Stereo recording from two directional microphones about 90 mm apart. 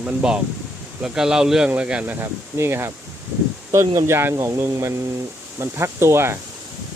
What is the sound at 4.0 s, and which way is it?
Speech, 30° right (ahead or behind).